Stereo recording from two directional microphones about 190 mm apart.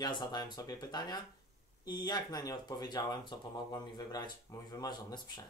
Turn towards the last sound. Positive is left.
turn(degrees=20)  # may be behind; listen again after turning